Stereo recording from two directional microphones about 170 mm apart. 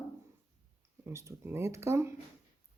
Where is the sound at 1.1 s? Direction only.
15° right (ahead or behind).